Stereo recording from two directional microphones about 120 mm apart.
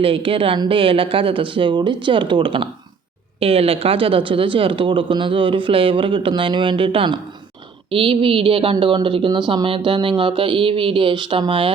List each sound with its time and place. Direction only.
0.0 s a woman's voice: 50° right (ahead or behind)